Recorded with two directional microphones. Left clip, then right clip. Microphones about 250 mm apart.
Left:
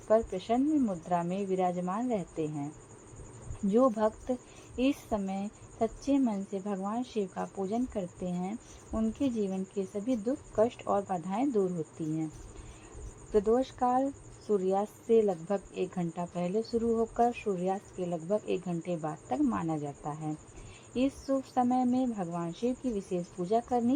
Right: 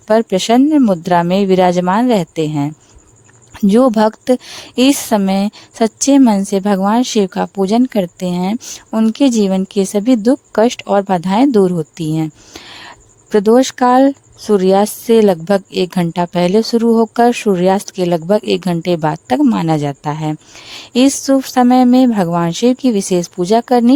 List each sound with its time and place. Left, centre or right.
0.1 s a woman's voice: right
3.7 s a woman's voice: right
13.3 s a woman's voice: right